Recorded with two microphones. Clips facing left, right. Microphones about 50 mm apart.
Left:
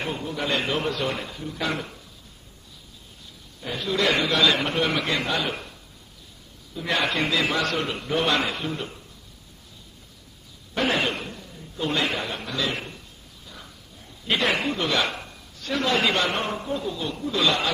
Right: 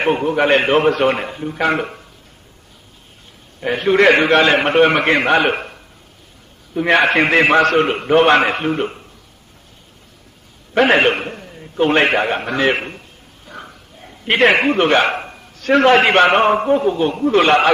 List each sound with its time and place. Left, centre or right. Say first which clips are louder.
0.0 s a man's voice: right 13 dB; right
3.6 s a man's voice: right 12 dB; right
10.7 s a man's voice: right 11 dB; right